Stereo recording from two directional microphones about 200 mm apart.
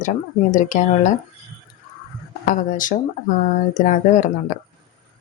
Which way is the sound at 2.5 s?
40° left (ahead or behind).